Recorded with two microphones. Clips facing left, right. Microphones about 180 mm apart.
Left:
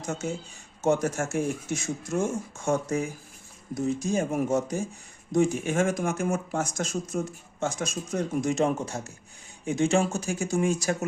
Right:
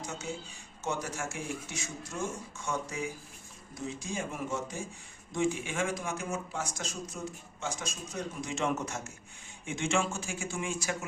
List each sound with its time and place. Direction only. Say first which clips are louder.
0.0 s speech: left 7 dB; 45° left (ahead or behind)